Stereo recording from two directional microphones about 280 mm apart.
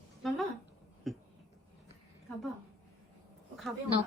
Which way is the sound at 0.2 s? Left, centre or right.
Centre.